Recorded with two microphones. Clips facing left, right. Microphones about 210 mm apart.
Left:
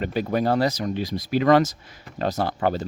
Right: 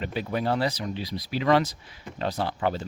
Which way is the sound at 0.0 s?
45° left (ahead or behind).